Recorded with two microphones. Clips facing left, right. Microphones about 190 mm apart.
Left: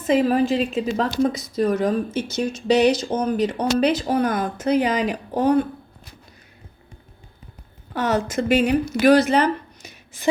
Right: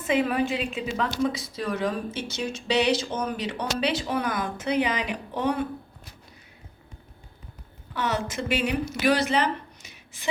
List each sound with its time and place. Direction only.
0.1 s a woman's voice: 35° left (ahead or behind)
7.9 s speech: 45° left (ahead or behind)